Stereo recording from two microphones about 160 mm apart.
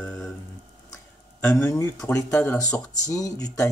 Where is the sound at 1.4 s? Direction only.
10° left (ahead or behind).